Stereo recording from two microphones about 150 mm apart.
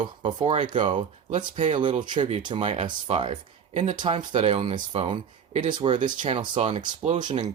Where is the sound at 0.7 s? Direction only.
35° right (ahead or behind).